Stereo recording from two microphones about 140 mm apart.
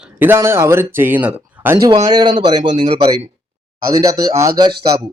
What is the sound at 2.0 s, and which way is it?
Speech, 30° right (ahead or behind).